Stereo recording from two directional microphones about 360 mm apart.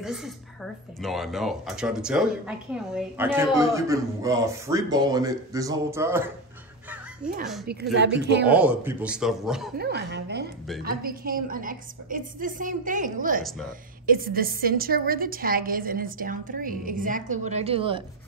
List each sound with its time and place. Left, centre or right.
0.0 s a woman's voice: centre
7.9 s a woman's voice: right
8.5 s speech: centre
9.8 s a woman's voice: right
13.4 s speech: centre
14.0 s a woman's voice: right